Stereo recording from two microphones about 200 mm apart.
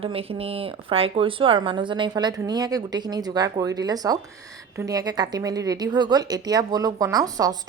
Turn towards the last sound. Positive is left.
turn(degrees=-20)  # may be behind; listen again after turning